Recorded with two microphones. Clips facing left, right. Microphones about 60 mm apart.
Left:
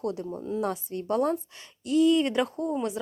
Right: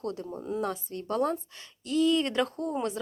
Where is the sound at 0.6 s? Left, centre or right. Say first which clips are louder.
Left 3 dB; left.